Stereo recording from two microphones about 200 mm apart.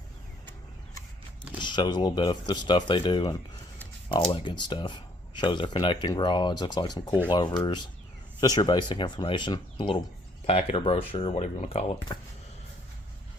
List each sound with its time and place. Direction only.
1.6 s speech: 20° left (ahead or behind)
4.4 s speech: 20° left (ahead or behind)
12.1 s speech: 20° left (ahead or behind)